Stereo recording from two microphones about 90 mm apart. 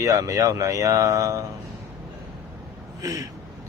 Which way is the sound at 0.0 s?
35° right (ahead or behind).